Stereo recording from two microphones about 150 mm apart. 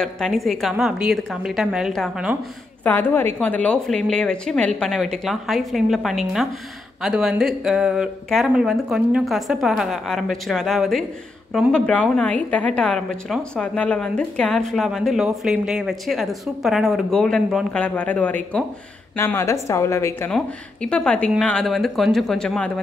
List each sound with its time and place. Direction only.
0.0 s a woman's voice: centre (ahead or behind)
2.8 s a woman's voice: 15° left (ahead or behind)
20.2 s a woman's voice: 5° left (ahead or behind)